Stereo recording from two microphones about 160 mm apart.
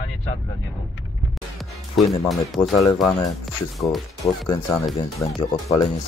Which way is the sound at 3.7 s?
Centre (ahead or behind).